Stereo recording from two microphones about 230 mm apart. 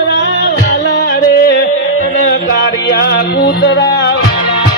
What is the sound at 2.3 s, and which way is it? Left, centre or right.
Music, left.